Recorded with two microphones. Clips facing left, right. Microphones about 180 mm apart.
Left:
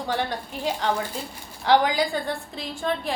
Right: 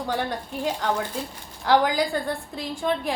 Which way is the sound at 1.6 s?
5° right (ahead or behind).